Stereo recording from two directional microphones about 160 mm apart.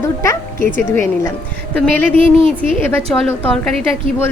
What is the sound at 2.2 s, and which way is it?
Speech, 35° right (ahead or behind).